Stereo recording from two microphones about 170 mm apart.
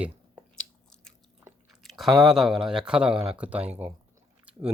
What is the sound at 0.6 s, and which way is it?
Biting, 5° left (ahead or behind).